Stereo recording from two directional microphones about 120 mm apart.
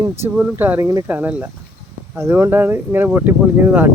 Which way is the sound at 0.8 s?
30° right (ahead or behind).